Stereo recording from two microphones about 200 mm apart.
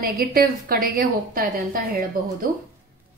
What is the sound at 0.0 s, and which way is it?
A woman's voice, 45° right (ahead or behind).